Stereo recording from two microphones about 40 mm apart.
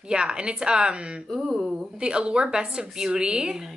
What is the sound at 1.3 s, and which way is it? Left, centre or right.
Speech, centre.